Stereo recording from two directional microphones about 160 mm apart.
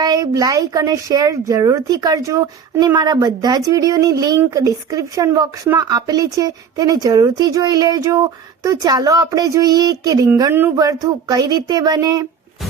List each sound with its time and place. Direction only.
0.0 s speech: 25° right (ahead or behind)